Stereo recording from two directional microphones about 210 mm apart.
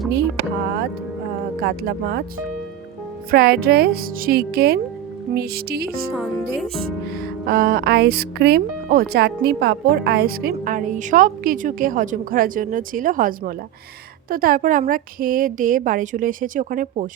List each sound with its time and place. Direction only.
1.6 s speech: 50° right (ahead or behind)
6.1 s speech: centre (ahead or behind)
7.4 s a woman's voice: 45° right (ahead or behind)